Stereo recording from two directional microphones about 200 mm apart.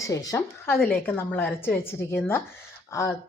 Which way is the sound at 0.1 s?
15° left (ahead or behind).